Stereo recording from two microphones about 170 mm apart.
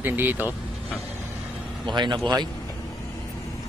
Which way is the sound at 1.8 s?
25° right (ahead or behind).